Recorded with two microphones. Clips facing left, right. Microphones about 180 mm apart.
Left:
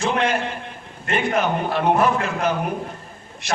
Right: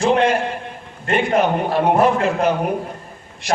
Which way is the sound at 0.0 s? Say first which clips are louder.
Right 6 dB; 30° right (ahead or behind).